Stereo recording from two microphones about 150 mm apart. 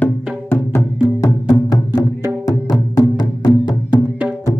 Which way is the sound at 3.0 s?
30° left (ahead or behind).